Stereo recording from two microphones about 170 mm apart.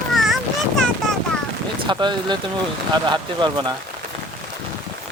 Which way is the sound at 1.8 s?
25° right (ahead or behind).